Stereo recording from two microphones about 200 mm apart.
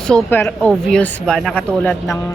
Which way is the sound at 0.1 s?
10° left (ahead or behind).